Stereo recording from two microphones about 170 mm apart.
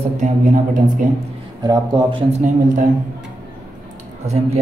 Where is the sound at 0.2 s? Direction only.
50° right (ahead or behind).